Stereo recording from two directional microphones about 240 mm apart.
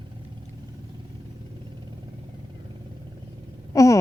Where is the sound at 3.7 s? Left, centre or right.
Centre.